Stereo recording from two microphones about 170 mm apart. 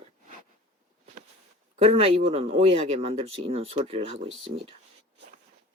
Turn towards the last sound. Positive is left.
turn(degrees=-35)  # may be behind; listen again after turning